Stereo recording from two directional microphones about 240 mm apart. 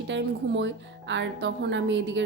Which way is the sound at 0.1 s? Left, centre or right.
Right.